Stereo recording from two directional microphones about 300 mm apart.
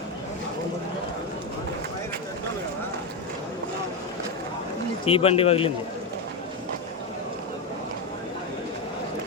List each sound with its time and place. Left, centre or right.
5.0 s speech: centre